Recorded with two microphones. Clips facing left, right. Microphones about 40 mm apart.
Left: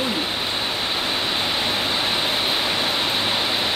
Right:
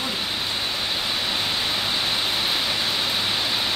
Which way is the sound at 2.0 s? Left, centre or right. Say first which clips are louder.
Left 2 dB; left.